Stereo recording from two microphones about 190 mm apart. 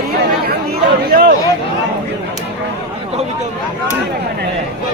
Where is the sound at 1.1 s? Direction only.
60° right (ahead or behind).